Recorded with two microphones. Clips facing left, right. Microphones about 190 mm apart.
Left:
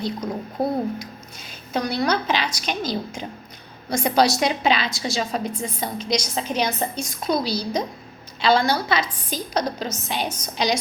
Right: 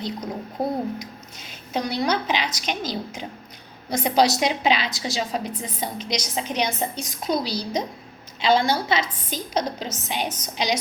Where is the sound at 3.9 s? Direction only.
20° right (ahead or behind).